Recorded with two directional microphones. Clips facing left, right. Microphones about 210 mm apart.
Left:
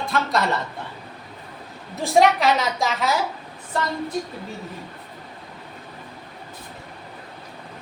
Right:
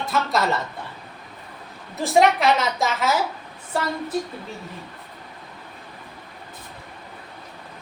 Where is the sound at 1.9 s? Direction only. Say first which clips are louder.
Even; centre (ahead or behind).